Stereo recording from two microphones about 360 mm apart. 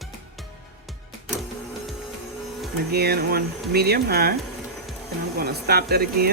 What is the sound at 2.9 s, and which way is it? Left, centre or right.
Speech, right.